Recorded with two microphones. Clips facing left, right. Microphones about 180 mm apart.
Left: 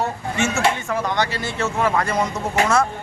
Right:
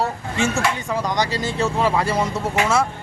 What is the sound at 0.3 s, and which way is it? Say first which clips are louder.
Speech: right 1 dB; 35° right (ahead or behind).